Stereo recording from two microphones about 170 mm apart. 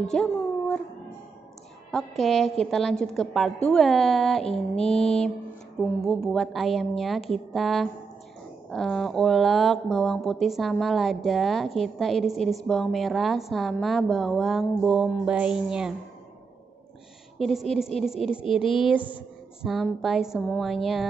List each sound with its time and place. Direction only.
0.1 s a sound: 5° left (ahead or behind)
1.9 s speech: centre (ahead or behind)
17.4 s speech: centre (ahead or behind)
18.6 s speech: 30° left (ahead or behind)
19.6 s speech: centre (ahead or behind)